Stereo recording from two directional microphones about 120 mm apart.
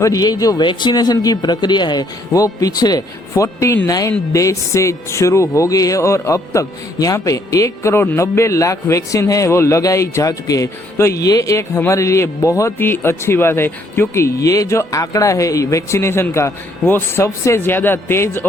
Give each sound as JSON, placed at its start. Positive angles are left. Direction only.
{"t": 0.0, "sound": "speech", "side_deg": 30}